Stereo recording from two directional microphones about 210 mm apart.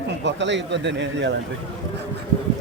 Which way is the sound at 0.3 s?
60° right (ahead or behind).